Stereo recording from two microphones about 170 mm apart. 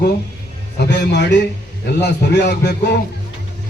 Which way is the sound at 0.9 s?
90° left.